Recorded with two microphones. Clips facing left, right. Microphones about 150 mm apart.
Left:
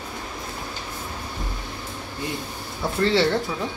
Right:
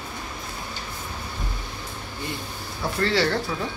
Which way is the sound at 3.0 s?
20° left (ahead or behind).